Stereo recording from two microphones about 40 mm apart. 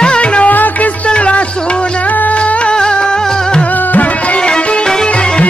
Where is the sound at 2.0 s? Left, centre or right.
Left.